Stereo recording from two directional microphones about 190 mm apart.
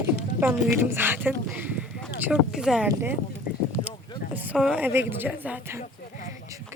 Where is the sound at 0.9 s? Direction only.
10° right (ahead or behind).